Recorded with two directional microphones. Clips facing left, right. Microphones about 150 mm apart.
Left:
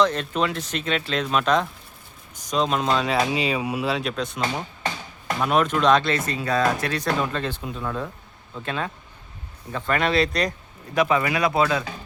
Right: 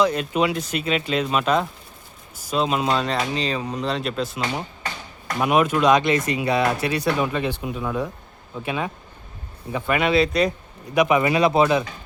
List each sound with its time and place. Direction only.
0.0 s speech: 10° right (ahead or behind)
10.9 s speech: 15° right (ahead or behind)